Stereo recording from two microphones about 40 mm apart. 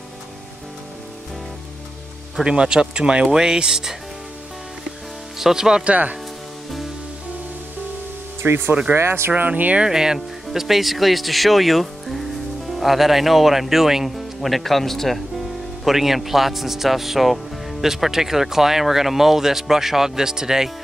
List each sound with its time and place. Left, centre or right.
2.4 s speech: right
5.4 s speech: centre
5.9 s speech: right
8.4 s speech: right
8.9 s speech: right
9.5 s speech: right
9.8 s speech: centre
15.8 s speech: centre